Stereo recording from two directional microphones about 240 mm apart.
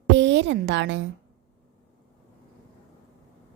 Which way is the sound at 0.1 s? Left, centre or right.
Right.